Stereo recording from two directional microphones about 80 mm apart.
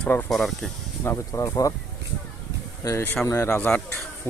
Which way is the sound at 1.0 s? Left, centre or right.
Left.